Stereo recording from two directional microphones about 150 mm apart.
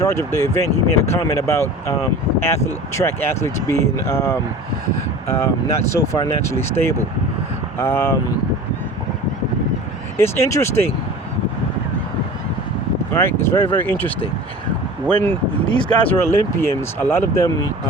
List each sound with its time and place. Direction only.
0.0 s speech: 20° left (ahead or behind)
10.2 s speech: 15° left (ahead or behind)
13.1 s speech: 15° left (ahead or behind)
15.0 s speech: 15° left (ahead or behind)